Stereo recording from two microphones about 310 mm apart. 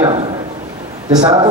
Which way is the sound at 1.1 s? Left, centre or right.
Centre.